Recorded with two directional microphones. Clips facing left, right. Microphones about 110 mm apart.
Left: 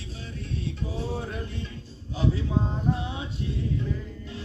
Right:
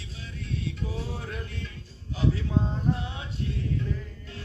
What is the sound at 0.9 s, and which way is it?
Music, 25° left (ahead or behind).